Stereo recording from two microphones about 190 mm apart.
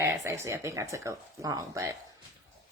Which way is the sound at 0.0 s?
15° right (ahead or behind).